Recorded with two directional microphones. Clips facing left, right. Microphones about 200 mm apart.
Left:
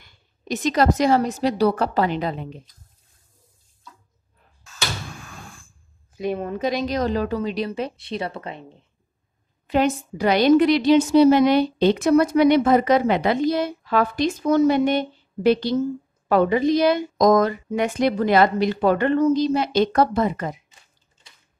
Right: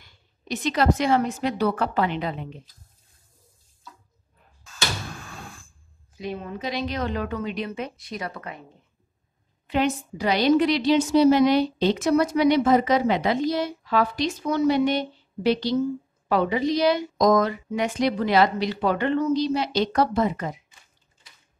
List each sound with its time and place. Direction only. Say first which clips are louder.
0.0 s a woman's voice: left 4 dB; 45° left (ahead or behind)
6.1 s a woman's voice: left 7 dB; 55° left (ahead or behind); by 8.6 s 25° left (ahead or behind)
9.7 s a woman's voice: left 3 dB; 45° left (ahead or behind)